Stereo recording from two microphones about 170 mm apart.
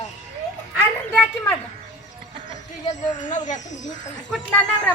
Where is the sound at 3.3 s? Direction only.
45° left (ahead or behind).